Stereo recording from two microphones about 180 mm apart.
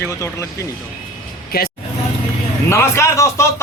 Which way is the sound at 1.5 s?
60° left (ahead or behind).